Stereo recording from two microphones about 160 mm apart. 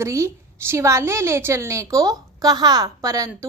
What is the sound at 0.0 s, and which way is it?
A woman's voice, 15° right (ahead or behind).